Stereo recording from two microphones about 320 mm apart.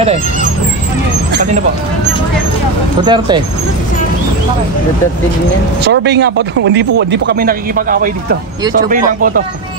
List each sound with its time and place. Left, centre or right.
3.1 s speech: centre
5.9 s speech: right